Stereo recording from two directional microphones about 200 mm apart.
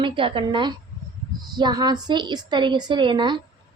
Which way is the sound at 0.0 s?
25° right (ahead or behind).